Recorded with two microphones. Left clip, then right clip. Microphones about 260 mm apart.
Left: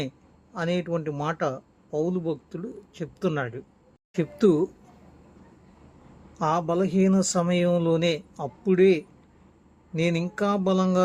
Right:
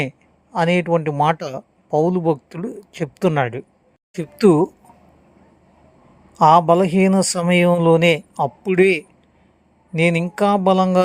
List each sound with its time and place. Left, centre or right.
0.5 s a man's voice: right
6.4 s a man's voice: right
10.0 s a man's voice: centre